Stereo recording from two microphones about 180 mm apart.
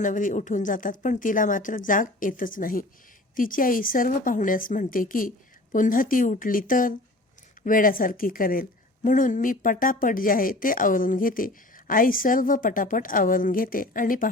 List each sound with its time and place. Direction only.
0.0 s speech: 45° left (ahead or behind)